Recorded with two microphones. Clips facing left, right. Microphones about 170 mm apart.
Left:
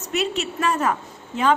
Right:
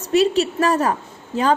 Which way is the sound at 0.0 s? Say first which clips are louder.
Right 8 dB; 35° right (ahead or behind).